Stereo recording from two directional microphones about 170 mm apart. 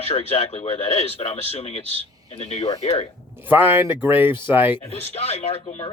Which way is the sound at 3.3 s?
10° right (ahead or behind).